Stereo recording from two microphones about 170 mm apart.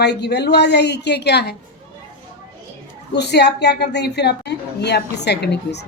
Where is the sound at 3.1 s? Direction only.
80° left.